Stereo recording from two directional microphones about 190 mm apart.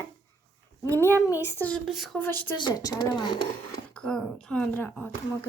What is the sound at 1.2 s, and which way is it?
A woman's voice, 15° left (ahead or behind).